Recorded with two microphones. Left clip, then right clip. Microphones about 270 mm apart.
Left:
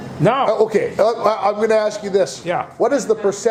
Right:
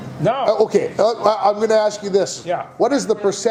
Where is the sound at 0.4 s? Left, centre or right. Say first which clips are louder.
Even; right.